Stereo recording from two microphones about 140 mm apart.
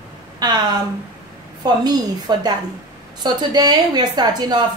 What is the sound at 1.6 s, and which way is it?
A woman's voice, 30° right (ahead or behind).